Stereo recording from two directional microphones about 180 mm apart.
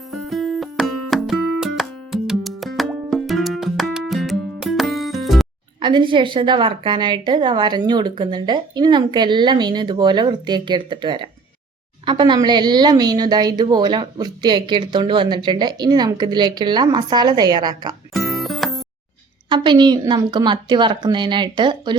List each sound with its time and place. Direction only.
0.1 s music: centre (ahead or behind)
5.8 s a woman's voice: 25° right (ahead or behind)
18.1 s music: centre (ahead or behind)
19.5 s a woman's voice: 25° right (ahead or behind)